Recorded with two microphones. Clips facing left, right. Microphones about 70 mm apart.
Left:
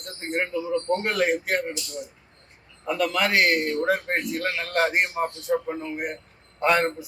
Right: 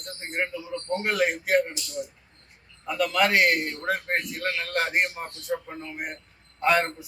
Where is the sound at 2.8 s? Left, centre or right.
Centre.